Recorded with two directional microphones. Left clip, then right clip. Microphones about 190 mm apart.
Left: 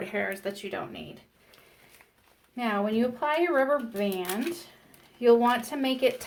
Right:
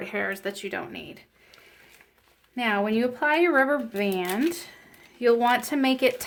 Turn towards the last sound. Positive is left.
turn(degrees=-45)  # may be behind; listen again after turning